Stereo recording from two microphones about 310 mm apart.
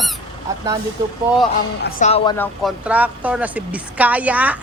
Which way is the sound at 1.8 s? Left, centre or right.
Left.